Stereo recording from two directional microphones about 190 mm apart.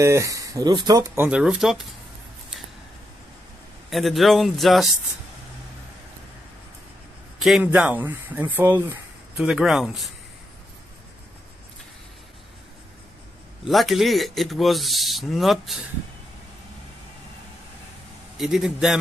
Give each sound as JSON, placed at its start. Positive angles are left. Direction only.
{"t": 0.0, "sound": "speech", "side_deg": -15}
{"t": 3.9, "sound": "speech", "side_deg": 0}
{"t": 7.3, "sound": "speech", "side_deg": 0}
{"t": 13.7, "sound": "speech", "side_deg": 0}
{"t": 18.4, "sound": "speech", "side_deg": 0}